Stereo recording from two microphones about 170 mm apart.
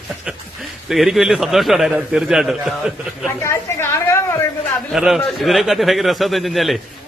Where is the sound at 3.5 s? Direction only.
15° left (ahead or behind).